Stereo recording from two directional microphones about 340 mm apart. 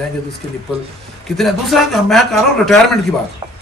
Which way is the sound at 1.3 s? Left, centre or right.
Centre.